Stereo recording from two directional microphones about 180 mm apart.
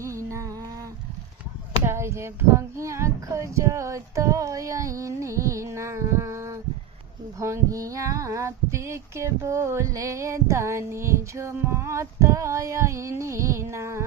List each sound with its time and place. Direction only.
0.0 s music: 15° right (ahead or behind)
1.8 s speech: 15° right (ahead or behind)
7.3 s a sound: 15° right (ahead or behind)